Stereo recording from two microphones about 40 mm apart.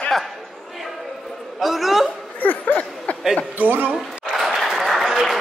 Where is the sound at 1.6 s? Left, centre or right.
Centre.